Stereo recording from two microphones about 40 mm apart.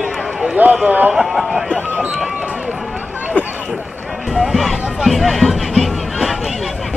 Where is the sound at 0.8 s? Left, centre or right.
Right.